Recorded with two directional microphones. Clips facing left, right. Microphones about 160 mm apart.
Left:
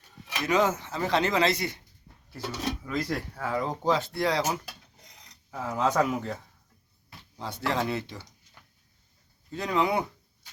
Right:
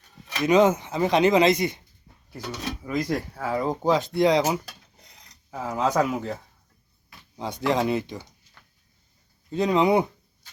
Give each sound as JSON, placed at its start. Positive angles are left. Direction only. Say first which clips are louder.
{"t": 0.4, "sound": "speech", "louder": "right 7 dB", "side_deg": -20}
{"t": 2.8, "sound": "speech", "louder": "right 4 dB", "side_deg": -15}
{"t": 7.3, "sound": "speech", "louder": "right 5 dB", "side_deg": -15}
{"t": 9.5, "sound": "speech", "louder": "right 6 dB", "side_deg": -20}